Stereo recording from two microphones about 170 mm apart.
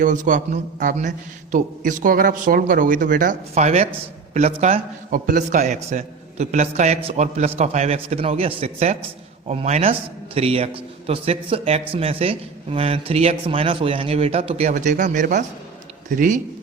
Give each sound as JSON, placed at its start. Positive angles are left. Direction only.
{"t": 0.0, "sound": "a man's voice", "side_deg": -50}
{"t": 5.1, "sound": "a man's voice", "side_deg": -50}